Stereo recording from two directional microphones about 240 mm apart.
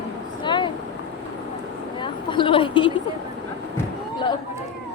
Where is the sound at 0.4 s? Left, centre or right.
Centre.